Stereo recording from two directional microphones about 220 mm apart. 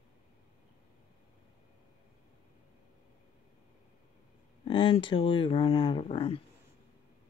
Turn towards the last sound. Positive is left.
turn(degrees=25)  # may be behind; listen again after turning